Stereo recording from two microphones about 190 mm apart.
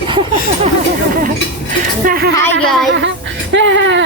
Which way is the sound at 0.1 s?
25° right (ahead or behind).